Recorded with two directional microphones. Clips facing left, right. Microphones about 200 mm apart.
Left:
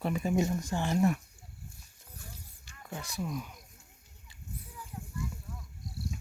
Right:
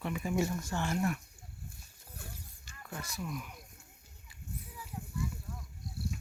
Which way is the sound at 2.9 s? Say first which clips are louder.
Left 4 dB; 25° left (ahead or behind).